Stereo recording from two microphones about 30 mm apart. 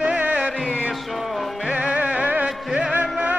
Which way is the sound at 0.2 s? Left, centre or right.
Right.